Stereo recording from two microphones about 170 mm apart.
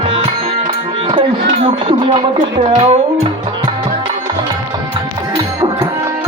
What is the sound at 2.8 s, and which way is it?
Music, 40° right (ahead or behind).